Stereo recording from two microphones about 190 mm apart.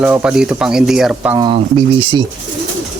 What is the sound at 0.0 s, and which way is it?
Speech, 5° right (ahead or behind).